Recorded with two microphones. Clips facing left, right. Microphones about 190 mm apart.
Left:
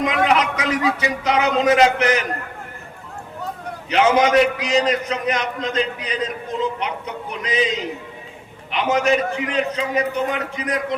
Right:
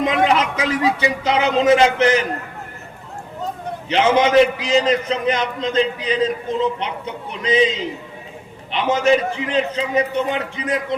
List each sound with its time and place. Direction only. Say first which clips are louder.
0.0 s speech: right 1 dB; 30° right (ahead or behind)
3.8 s a man's voice: even; 30° right (ahead or behind)
8.7 s a man's voice: right 2 dB; 30° right (ahead or behind)